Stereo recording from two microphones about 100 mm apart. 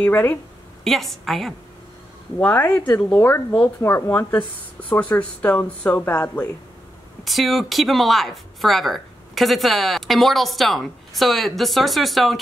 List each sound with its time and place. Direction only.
0.0 s speech: 20° left (ahead or behind)
0.8 s speech: centre (ahead or behind)
2.3 s speech: 15° left (ahead or behind)
7.2 s speech: centre (ahead or behind)